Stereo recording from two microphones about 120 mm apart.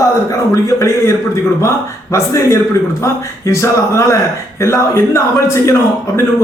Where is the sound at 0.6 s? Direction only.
25° left (ahead or behind).